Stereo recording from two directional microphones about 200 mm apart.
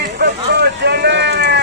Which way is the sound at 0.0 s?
55° right (ahead or behind).